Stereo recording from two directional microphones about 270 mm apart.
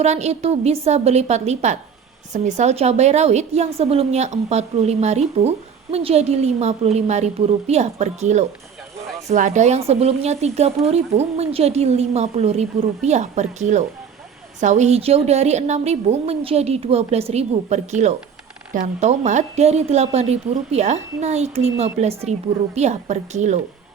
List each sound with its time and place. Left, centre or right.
0.0 s a woman's voice: right